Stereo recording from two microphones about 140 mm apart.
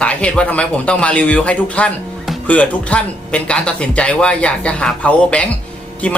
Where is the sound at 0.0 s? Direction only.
10° left (ahead or behind).